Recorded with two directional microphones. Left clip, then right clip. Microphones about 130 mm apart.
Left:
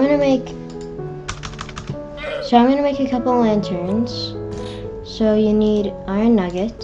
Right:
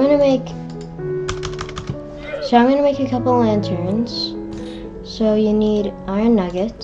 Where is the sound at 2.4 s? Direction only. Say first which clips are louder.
Right 1 dB; centre (ahead or behind).